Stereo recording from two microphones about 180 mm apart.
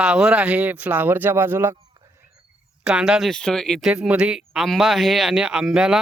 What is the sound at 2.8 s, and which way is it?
Speech, 5° right (ahead or behind).